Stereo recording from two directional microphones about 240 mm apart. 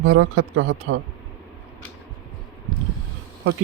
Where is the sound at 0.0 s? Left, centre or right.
Right.